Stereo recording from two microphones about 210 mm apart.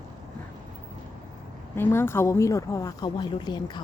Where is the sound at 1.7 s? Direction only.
10° left (ahead or behind).